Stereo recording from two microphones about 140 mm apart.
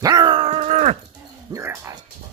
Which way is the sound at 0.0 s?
30° right (ahead or behind).